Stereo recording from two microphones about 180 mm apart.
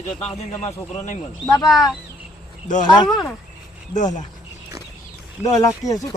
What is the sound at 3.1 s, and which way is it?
Speech, centre (ahead or behind).